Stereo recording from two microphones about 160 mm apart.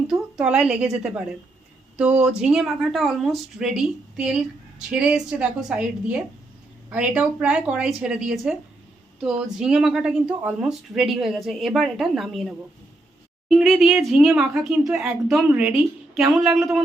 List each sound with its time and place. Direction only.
0.1 s a woman's voice: 5° right (ahead or behind)